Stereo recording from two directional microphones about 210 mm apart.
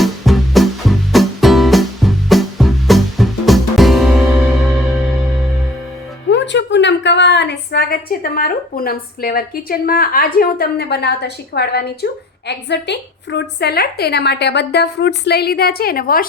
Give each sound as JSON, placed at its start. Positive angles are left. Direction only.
{"t": 0.0, "sound": "music", "side_deg": 0}
{"t": 6.3, "sound": "a woman's voice", "side_deg": 55}